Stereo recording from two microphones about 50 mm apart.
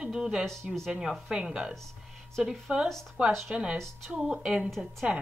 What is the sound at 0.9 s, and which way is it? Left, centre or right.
A woman's voice, centre.